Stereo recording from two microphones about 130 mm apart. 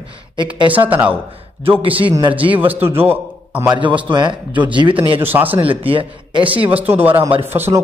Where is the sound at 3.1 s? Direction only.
15° right (ahead or behind).